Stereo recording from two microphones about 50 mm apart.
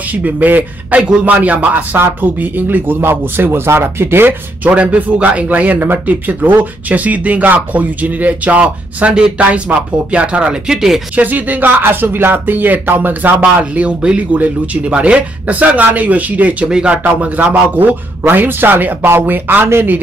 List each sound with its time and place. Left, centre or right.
0.1 s speech: right
4.6 s speech: right; by 11.0 s centre
11.1 s speech: right
11.8 s speech: right
13.4 s speech: right
16.6 s speech: centre
16.9 s speech: right
17.7 s speech: right